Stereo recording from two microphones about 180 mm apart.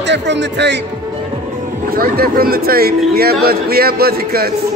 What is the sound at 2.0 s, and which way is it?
A man's voice, 55° right (ahead or behind).